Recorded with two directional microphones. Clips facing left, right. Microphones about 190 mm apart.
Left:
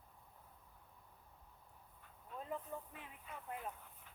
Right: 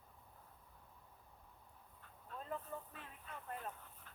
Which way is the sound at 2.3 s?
15° left (ahead or behind).